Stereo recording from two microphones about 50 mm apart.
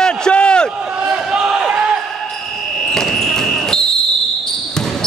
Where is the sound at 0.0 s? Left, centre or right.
Centre.